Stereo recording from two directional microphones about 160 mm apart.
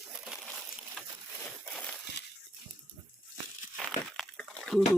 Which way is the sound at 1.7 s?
5° left (ahead or behind).